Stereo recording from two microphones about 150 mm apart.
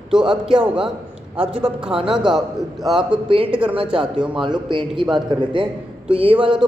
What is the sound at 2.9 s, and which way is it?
Speech, 35° right (ahead or behind).